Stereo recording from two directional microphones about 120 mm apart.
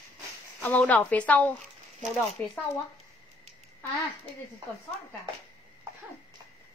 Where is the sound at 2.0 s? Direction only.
Centre (ahead or behind).